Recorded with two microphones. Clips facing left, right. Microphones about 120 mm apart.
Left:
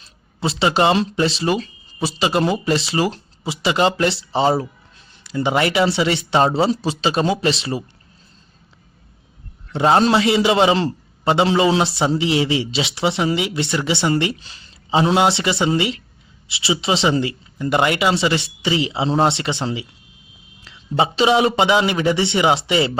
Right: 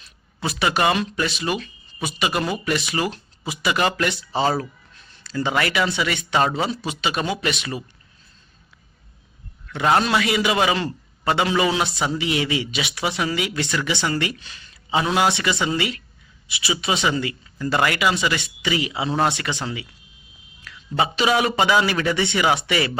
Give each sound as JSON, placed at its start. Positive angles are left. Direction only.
{"t": 0.0, "sound": "a man's voice", "side_deg": 25}
{"t": 9.6, "sound": "a man's voice", "side_deg": 30}